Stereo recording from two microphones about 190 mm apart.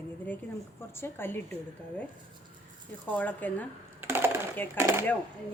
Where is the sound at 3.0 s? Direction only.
10° left (ahead or behind).